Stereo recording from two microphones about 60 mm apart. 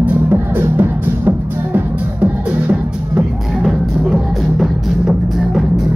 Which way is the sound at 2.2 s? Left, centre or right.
Centre.